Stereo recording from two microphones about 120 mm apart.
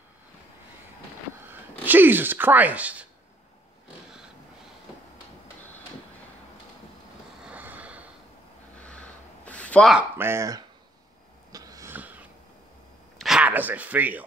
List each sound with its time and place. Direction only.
1.9 s speech: 15° right (ahead or behind)
7.4 s vehicle: 15° right (ahead or behind)
8.8 s a sound: 10° left (ahead or behind)
10.1 s speech: 20° right (ahead or behind)
11.5 s wheeze: 30° right (ahead or behind)
11.9 s wheeze: 15° right (ahead or behind)
13.2 s a sound: 5° right (ahead or behind)
13.5 s speech: 15° right (ahead or behind)